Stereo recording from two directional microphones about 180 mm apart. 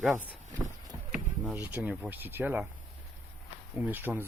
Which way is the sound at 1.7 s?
10° right (ahead or behind).